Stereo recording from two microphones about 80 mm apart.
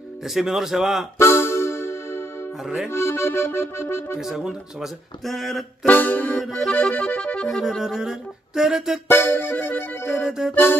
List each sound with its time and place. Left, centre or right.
0.2 s music: centre
1.1 s music: left
2.6 s music: centre
2.9 s accordion: left
4.2 s music: centre
5.9 s music: left
6.5 s music: centre
7.4 s music: centre
9.1 s music: left
10.2 s music: centre
10.5 s music: left